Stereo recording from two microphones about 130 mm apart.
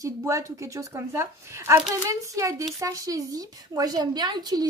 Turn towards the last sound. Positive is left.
turn(degrees=-30)  # may be behind; listen again after turning